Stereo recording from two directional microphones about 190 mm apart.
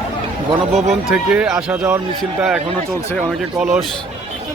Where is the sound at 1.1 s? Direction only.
5° right (ahead or behind).